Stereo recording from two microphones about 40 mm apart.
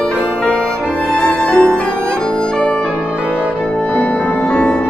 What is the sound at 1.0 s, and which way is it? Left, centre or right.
Music, left.